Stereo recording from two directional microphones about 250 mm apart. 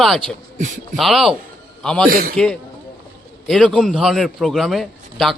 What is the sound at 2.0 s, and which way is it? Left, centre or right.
Speech, right.